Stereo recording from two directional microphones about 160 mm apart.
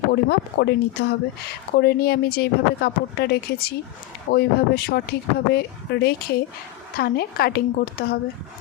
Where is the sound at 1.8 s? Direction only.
75° left (ahead or behind).